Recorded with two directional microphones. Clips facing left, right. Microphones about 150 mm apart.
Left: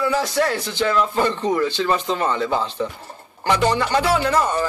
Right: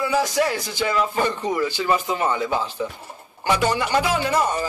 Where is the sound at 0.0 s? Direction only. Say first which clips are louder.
Left 1 dB; 10° right (ahead or behind).